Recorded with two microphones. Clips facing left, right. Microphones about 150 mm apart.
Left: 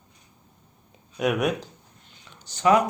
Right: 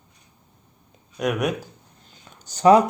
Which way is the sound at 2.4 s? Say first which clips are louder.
Right 5 dB; 40° right (ahead or behind).